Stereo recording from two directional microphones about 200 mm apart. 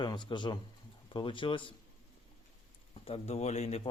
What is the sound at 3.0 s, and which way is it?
Speech, 30° left (ahead or behind).